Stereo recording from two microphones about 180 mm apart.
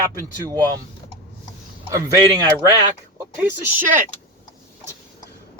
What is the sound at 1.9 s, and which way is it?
Speech, 15° right (ahead or behind).